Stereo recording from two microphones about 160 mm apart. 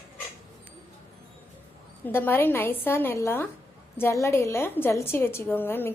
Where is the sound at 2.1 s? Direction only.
15° left (ahead or behind).